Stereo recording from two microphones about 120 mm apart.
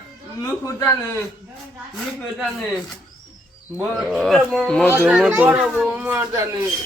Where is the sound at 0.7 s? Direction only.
25° left (ahead or behind).